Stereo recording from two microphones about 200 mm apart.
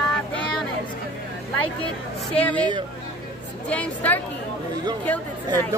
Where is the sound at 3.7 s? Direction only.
5° left (ahead or behind).